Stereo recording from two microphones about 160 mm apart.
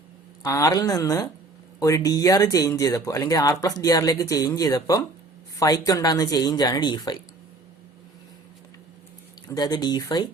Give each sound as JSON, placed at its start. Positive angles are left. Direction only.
{"t": 0.4, "sound": "speech", "side_deg": 20}
{"t": 9.6, "sound": "speech", "side_deg": 25}